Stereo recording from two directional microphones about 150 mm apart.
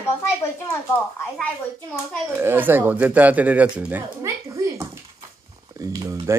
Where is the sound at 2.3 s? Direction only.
15° right (ahead or behind).